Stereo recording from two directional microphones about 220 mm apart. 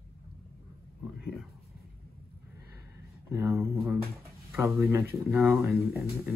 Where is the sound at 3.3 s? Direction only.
10° right (ahead or behind).